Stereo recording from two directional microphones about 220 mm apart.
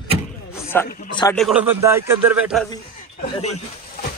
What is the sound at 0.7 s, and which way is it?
Speech, 10° left (ahead or behind).